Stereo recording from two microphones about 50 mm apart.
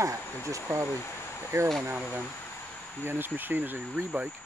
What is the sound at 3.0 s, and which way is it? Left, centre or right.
Speech, right.